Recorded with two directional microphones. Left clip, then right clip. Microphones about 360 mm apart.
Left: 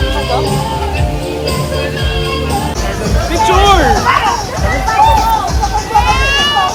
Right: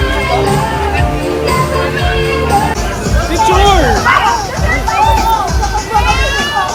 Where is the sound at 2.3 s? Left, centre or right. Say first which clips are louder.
Right 5 dB; centre.